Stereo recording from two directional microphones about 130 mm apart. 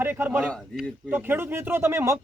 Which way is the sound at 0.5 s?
5° left (ahead or behind).